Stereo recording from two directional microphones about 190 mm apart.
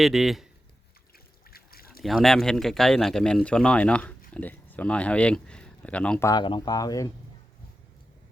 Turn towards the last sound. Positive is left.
turn(degrees=20)  # may be behind; listen again after turning